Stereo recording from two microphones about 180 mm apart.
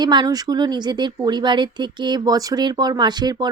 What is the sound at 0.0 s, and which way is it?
Speech, 25° right (ahead or behind).